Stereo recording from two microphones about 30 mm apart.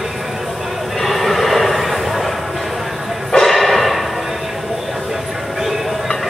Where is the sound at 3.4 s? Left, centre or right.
Centre.